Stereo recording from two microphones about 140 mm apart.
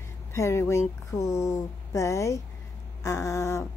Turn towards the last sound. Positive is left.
turn(degrees=20)  # may be behind; listen again after turning